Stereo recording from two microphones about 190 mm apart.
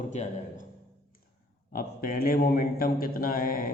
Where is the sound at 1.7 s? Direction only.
50° left (ahead or behind).